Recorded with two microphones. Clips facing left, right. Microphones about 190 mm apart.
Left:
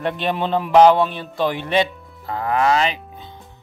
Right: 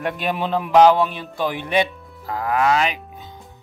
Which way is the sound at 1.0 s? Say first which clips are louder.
Left 2 dB; 10° right (ahead or behind).